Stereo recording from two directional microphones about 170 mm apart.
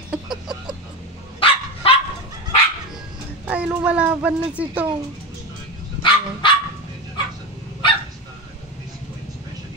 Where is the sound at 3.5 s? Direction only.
10° right (ahead or behind).